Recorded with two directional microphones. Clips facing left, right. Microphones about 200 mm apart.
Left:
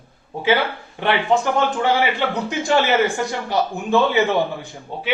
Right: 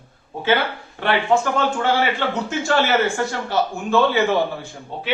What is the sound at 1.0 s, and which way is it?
Speech, 15° left (ahead or behind).